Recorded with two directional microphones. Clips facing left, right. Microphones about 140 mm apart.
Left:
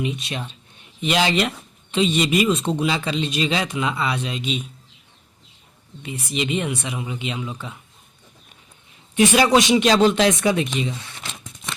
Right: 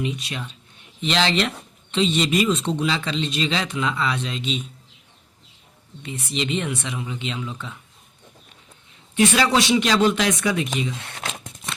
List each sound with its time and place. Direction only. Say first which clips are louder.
0.0 s speech: left 1 dB; 20° left (ahead or behind)
1.0 s speech: left 2 dB; 10° left (ahead or behind)
6.0 s speech: left 1 dB; 10° left (ahead or behind)
9.1 s speech: left 3 dB; 20° left (ahead or behind)
11.0 s crumpling: right 5 dB; 60° right (ahead or behind)